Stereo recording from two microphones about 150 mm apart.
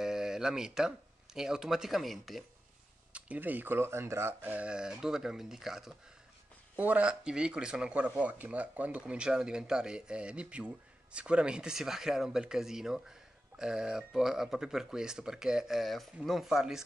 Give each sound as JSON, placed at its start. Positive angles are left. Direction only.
{"t": 0.0, "sound": "speech", "side_deg": -5}